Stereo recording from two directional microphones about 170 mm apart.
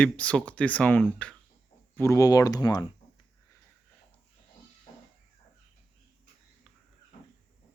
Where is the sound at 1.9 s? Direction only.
15° left (ahead or behind).